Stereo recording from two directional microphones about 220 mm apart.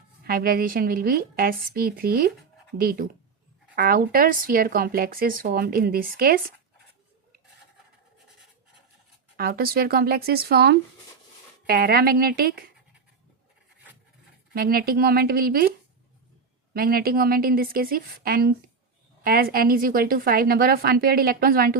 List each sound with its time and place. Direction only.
0.3 s speech: 40° right (ahead or behind)
9.4 s a woman's voice: 45° right (ahead or behind)
14.5 s a woman's voice: 45° right (ahead or behind)
16.7 s a woman's voice: 40° right (ahead or behind)